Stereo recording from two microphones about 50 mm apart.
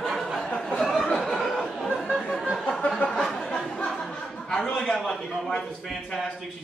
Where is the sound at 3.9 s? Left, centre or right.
Centre.